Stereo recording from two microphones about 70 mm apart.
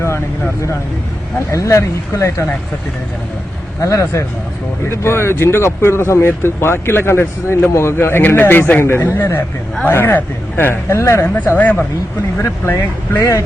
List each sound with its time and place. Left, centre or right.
1.4 s speech: left
3.8 s speech: left
10.2 s speech: left
10.9 s speech: left
11.5 s speech: left
12.4 s speech: left